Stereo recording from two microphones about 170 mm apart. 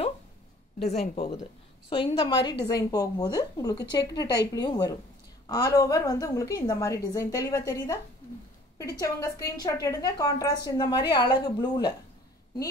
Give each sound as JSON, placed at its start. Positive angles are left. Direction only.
{"t": 0.7, "sound": "a woman's voice", "side_deg": 40}